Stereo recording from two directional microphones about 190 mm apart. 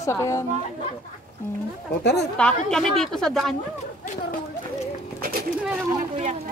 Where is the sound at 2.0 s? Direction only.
60° left (ahead or behind).